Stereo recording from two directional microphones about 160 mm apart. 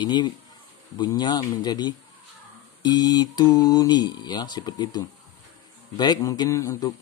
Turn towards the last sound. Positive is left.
turn(degrees=20)  # may be behind; listen again after turning